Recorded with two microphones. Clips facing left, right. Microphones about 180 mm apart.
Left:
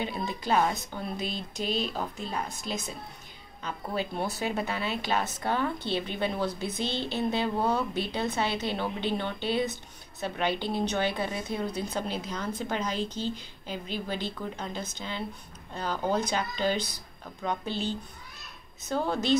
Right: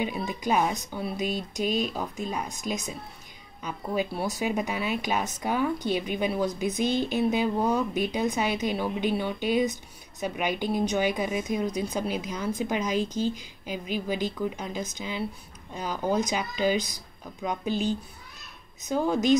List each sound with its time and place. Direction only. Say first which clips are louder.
0.0 s a woman's voice: right 3 dB; 10° right (ahead or behind)
3.6 s a woman's voice: right 3 dB; 10° right (ahead or behind)
18.9 s a woman's voice: right 4 dB; 10° right (ahead or behind)